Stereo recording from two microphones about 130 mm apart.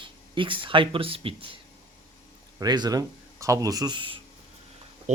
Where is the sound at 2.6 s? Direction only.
30° right (ahead or behind).